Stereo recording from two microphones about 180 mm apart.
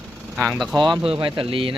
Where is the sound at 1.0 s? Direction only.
30° right (ahead or behind).